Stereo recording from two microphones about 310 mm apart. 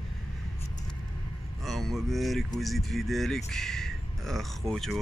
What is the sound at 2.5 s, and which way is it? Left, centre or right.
Speech, centre.